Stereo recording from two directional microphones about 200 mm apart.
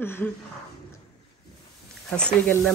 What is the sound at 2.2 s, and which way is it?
Speech, 5° left (ahead or behind).